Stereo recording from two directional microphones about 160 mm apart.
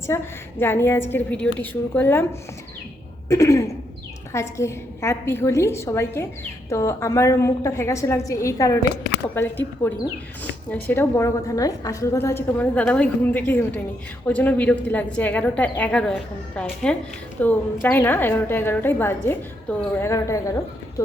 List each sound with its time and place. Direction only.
0.1 s a woman's voice: 15° left (ahead or behind)
3.2 s a woman's voice: 20° left (ahead or behind)